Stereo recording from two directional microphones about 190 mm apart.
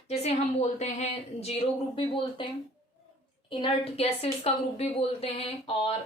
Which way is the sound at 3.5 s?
30° left (ahead or behind).